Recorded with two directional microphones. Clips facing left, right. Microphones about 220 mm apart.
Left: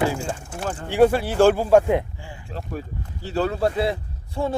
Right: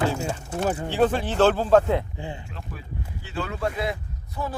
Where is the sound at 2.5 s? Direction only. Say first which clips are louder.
Left 7 dB; 40° left (ahead or behind).